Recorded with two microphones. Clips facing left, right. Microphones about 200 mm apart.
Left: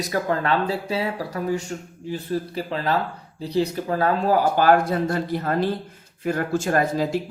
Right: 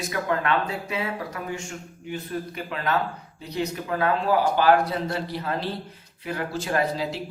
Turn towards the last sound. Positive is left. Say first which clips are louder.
# left 4 dB
turn(degrees=45)  # may be behind; listen again after turning